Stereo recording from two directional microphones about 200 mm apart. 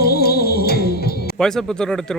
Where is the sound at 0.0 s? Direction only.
50° left (ahead or behind).